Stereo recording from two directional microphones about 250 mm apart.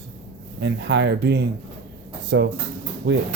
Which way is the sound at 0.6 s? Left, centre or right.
Right.